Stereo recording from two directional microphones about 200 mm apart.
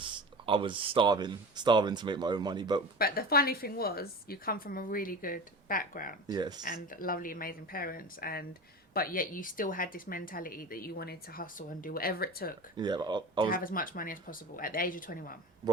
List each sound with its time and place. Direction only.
0.0 s speech: 25° right (ahead or behind)
3.0 s a woman's voice: 50° left (ahead or behind)
6.2 s speech: 20° right (ahead or behind)
6.6 s a woman's voice: 45° left (ahead or behind)
12.7 s speech: 20° right (ahead or behind)
13.5 s a woman's voice: 45° left (ahead or behind)